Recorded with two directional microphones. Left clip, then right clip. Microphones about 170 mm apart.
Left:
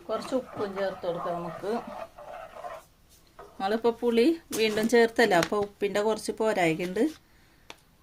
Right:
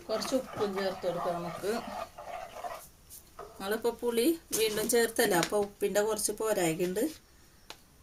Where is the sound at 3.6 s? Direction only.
55° left (ahead or behind).